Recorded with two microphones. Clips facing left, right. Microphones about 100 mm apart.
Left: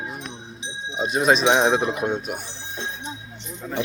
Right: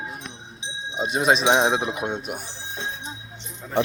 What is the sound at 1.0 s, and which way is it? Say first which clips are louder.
Speech: left 1 dB; 25° right (ahead or behind).